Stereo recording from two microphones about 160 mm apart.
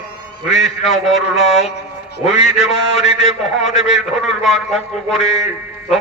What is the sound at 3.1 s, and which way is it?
Speech, 40° left (ahead or behind).